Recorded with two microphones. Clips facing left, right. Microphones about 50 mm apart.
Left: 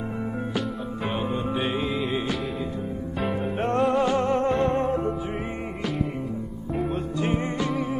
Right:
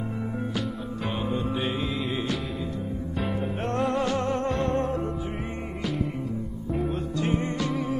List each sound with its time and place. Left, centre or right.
1.3 s music: centre
3.2 s music: centre
3.6 s music: left
7.2 s music: left